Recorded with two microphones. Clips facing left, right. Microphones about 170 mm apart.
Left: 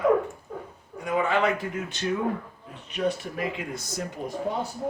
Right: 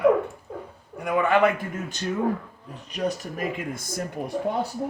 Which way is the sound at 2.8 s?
40° right (ahead or behind).